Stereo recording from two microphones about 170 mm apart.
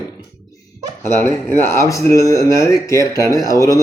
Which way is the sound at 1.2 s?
15° left (ahead or behind).